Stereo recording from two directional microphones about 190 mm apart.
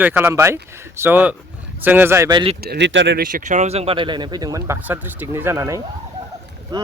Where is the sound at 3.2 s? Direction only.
40° right (ahead or behind).